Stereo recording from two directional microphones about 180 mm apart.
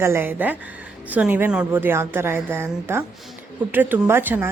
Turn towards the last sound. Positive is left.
turn(degrees=-10)  # may be behind; listen again after turning